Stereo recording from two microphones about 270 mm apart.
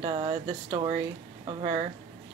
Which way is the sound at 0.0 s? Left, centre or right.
Centre.